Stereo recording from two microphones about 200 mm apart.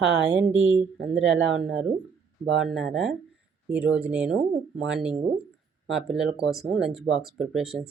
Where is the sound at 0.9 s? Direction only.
Centre (ahead or behind).